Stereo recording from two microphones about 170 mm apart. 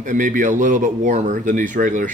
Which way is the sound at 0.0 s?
50° right (ahead or behind).